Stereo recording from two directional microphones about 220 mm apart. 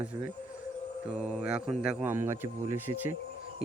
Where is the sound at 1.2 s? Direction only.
5° right (ahead or behind).